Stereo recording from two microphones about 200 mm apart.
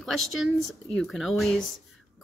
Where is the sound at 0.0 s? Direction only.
Centre (ahead or behind).